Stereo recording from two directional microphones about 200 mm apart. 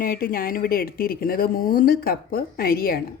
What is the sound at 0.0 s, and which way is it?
Speech, 45° left (ahead or behind).